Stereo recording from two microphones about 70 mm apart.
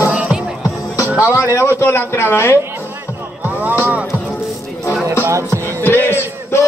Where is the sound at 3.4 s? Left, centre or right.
Right.